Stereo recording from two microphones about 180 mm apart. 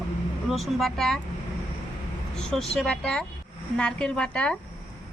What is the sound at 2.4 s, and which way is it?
Speech, 5° left (ahead or behind).